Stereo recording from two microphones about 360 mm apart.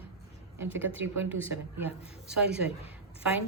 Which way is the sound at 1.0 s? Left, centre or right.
Centre.